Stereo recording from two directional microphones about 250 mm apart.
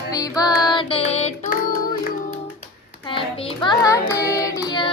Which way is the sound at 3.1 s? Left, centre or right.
Left.